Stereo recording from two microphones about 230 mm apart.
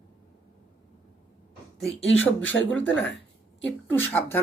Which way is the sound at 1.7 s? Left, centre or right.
Centre.